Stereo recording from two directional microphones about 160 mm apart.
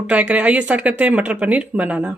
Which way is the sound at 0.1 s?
10° right (ahead or behind).